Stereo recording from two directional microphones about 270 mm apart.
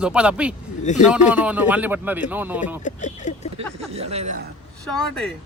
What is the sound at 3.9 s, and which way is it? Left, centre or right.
Speech, right.